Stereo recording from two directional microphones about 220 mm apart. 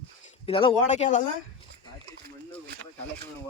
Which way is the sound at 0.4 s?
25° left (ahead or behind).